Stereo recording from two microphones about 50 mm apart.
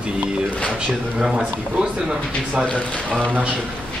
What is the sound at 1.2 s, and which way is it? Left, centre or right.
A man's voice, centre.